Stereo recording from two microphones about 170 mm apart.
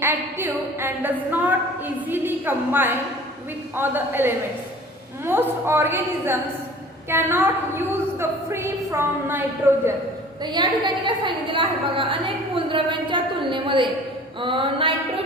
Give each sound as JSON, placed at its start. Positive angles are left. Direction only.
{"t": 0.0, "sound": "a woman's voice", "side_deg": -15}
{"t": 10.4, "sound": "a woman's voice", "side_deg": -25}
{"t": 14.4, "sound": "mantra", "side_deg": -30}